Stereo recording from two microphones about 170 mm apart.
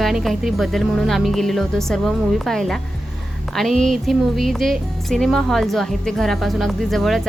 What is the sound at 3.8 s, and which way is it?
Speech, centre (ahead or behind).